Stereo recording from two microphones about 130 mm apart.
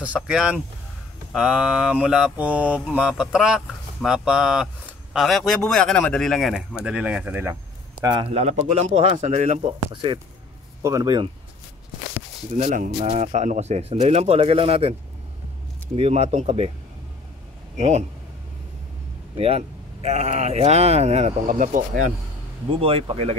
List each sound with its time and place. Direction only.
0.0 s speech: 10° right (ahead or behind)
1.3 s mantra: 5° right (ahead or behind)
8.0 s speech: 35° right (ahead or behind)
8.3 s speech: 60° right (ahead or behind)
9.6 s speech: 45° right (ahead or behind)
10.8 s speech: 25° right (ahead or behind)
12.5 s speech: 80° right
13.0 s speech: 60° right (ahead or behind)
16.0 s speech: 50° right (ahead or behind)
17.7 s speech: 60° right (ahead or behind)
19.3 s speech: 50° right (ahead or behind); by 22.1 s 80° right
22.7 s speech: 45° right (ahead or behind)